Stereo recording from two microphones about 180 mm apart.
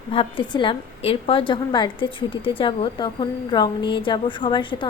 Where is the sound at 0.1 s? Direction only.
30° left (ahead or behind).